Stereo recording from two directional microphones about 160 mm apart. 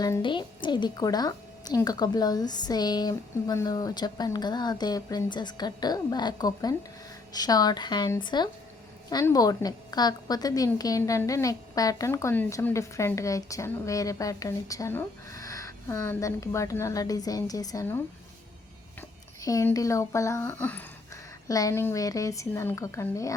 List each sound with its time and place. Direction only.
0.0 s a woman's voice: 25° left (ahead or behind); by 20.8 s 10° left (ahead or behind)
21.4 s a woman's voice: 20° left (ahead or behind)